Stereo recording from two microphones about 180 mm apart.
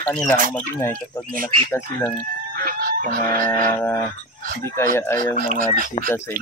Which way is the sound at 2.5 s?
55° right (ahead or behind).